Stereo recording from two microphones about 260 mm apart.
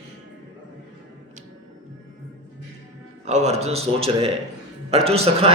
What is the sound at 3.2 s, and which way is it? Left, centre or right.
A man's voice, right.